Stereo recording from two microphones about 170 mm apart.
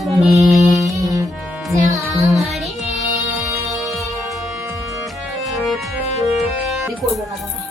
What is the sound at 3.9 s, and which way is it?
Music, 20° right (ahead or behind).